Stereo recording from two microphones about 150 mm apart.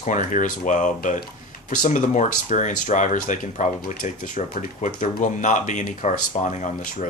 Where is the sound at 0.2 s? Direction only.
60° left (ahead or behind).